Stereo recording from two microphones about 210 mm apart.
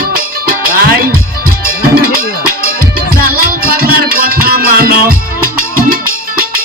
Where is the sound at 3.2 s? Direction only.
45° right (ahead or behind).